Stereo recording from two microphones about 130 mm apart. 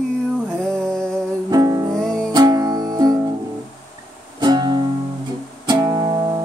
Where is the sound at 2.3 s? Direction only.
30° right (ahead or behind).